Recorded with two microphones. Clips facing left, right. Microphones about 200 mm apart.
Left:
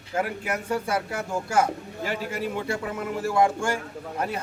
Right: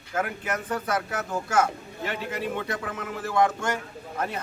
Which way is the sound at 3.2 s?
10° left (ahead or behind).